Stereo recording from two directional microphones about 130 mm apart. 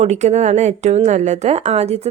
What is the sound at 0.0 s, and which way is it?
A woman's voice, 60° right (ahead or behind).